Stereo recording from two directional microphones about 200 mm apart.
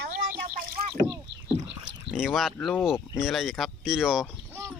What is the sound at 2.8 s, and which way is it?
Speech, centre (ahead or behind).